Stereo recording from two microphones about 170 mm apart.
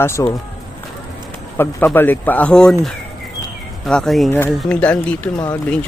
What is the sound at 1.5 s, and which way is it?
Speech, 15° left (ahead or behind).